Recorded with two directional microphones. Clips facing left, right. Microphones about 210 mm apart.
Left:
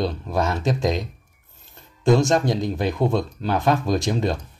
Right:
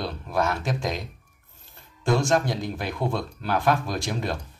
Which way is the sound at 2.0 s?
20° left (ahead or behind).